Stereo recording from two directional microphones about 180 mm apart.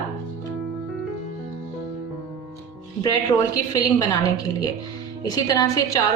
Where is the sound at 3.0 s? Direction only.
20° left (ahead or behind).